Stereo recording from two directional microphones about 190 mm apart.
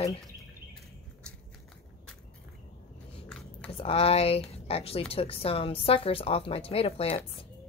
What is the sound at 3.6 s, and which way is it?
Speech, 30° left (ahead or behind).